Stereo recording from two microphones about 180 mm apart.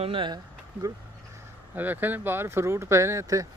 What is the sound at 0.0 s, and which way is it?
Speech, 30° right (ahead or behind).